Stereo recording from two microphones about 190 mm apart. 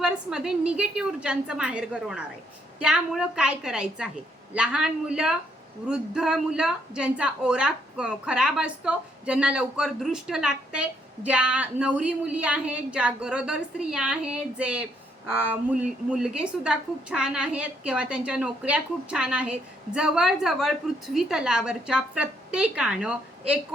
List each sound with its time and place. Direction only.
0.0 s a woman's voice: 5° right (ahead or behind)